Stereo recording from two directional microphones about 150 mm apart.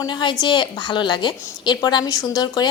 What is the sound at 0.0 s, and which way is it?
A woman's voice, 30° left (ahead or behind).